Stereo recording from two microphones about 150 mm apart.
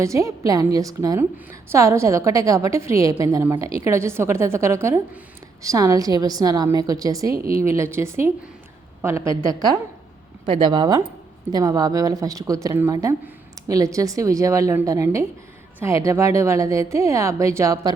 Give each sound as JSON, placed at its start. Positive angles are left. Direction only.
{"t": 0.0, "sound": "a woman's voice", "side_deg": -20}
{"t": 7.3, "sound": "speech", "side_deg": -75}
{"t": 7.6, "sound": "a woman's voice", "side_deg": -20}